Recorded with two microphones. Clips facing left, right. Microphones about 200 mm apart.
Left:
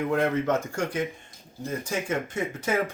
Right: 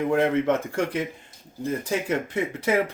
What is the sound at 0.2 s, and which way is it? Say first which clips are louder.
Speech: right 3 dB; 30° right (ahead or behind).